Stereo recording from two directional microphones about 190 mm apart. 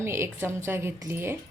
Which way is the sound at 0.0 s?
15° right (ahead or behind).